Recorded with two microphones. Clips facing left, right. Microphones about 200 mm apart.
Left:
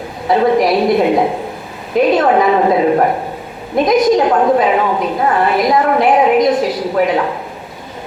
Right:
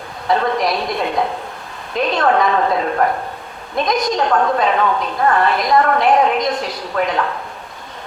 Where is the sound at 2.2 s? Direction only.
15° left (ahead or behind).